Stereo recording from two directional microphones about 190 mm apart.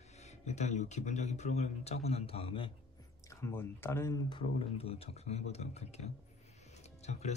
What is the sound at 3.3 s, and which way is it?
Speech, 15° left (ahead or behind).